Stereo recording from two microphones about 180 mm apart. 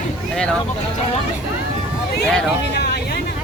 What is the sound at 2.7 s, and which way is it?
Vehicle, 65° left (ahead or behind).